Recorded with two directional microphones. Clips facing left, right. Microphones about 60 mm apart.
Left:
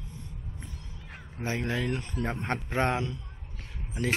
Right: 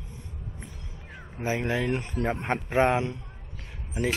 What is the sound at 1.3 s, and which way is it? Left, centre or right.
Speech, centre.